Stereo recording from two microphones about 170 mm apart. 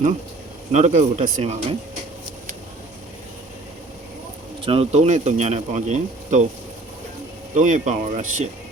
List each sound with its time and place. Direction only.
0.7 s speech: 45° right (ahead or behind)
4.6 s speech: 35° right (ahead or behind)
7.5 s speech: 45° right (ahead or behind)